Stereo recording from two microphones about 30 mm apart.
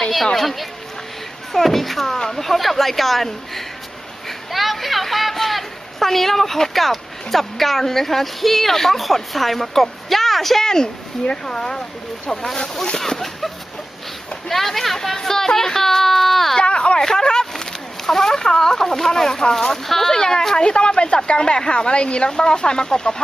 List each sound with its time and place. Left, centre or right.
0.3 s speech: centre
2.1 s speech: centre
2.4 s a woman's voice: centre
10.6 s a woman's voice: left
16.6 s a sound: left
17.0 s speech: left
18.0 s speech: centre
18.3 s a woman's voice: left
20.1 s speech: left
20.6 s a woman's voice: left